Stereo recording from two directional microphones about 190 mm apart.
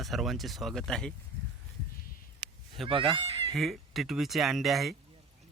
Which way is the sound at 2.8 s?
25° right (ahead or behind).